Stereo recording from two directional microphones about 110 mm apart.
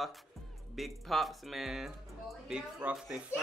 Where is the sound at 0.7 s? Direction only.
Centre (ahead or behind).